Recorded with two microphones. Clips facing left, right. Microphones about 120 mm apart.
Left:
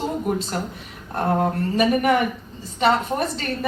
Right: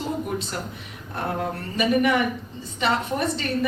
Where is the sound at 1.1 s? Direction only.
45° left (ahead or behind).